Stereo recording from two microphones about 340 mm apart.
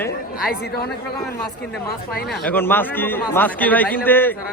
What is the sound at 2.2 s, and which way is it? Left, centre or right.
A man's voice, centre.